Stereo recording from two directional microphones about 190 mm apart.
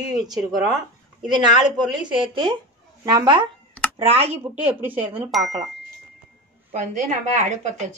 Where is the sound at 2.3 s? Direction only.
25° right (ahead or behind).